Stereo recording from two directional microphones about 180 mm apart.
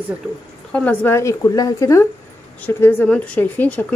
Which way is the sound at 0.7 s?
10° left (ahead or behind).